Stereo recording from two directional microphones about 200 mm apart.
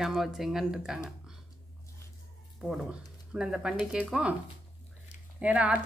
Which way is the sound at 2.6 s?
Centre (ahead or behind).